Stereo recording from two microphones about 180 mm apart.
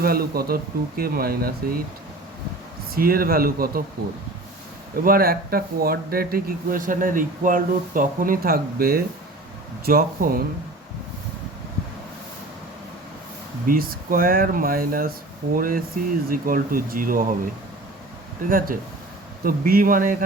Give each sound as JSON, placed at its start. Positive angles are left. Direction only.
{"t": 0.0, "sound": "speech", "side_deg": -55}
{"t": 2.9, "sound": "speech", "side_deg": -55}
{"t": 5.0, "sound": "speech", "side_deg": -55}
{"t": 13.7, "sound": "speech", "side_deg": -55}
{"t": 18.4, "sound": "speech", "side_deg": -50}